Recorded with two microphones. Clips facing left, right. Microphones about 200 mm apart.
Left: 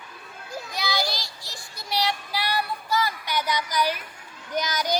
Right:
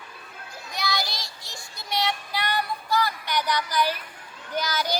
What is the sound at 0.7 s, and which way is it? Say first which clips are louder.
Child singing: left 1 dB; centre (ahead or behind).